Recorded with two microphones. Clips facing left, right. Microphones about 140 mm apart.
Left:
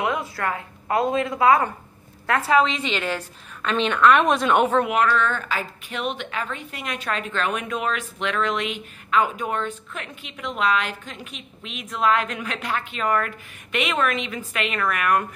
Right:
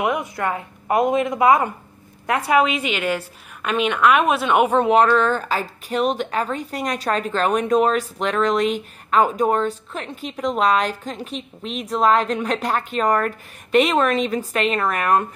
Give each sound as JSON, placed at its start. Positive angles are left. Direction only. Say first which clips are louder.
{"t": 0.0, "sound": "a woman's voice", "louder": "right 3 dB", "side_deg": -20}
{"t": 5.0, "sound": "a woman's voice", "louder": "right 4 dB", "side_deg": -35}